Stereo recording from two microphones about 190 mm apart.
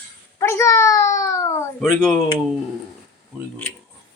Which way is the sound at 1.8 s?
Centre (ahead or behind).